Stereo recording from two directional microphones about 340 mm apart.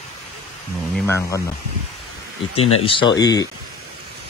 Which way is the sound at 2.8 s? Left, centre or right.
Centre.